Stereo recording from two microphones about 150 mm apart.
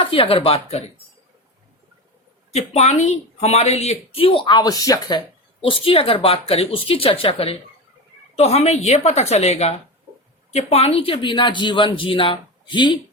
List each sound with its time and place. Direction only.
0.0 s speech: 35° left (ahead or behind)
2.5 s a woman's voice: 45° left (ahead or behind)